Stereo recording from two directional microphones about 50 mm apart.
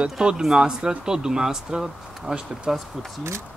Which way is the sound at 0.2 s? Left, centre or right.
Centre.